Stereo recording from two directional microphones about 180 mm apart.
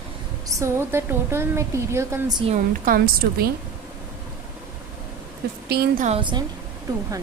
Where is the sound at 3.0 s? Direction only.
60° right (ahead or behind).